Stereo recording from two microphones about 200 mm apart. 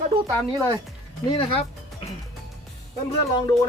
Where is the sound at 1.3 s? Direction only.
30° left (ahead or behind).